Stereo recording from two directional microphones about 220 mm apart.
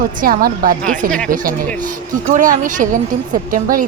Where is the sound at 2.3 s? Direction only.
35° right (ahead or behind).